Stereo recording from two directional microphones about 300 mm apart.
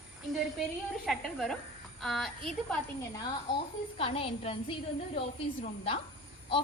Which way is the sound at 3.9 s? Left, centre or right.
Centre.